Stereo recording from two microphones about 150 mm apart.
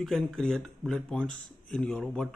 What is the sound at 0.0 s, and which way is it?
Speech, centre (ahead or behind).